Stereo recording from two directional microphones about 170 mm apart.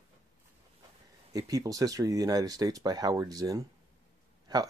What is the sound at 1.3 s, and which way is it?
Speech, 20° right (ahead or behind).